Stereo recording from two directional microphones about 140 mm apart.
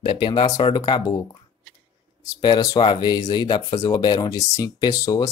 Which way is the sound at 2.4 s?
30° left (ahead or behind).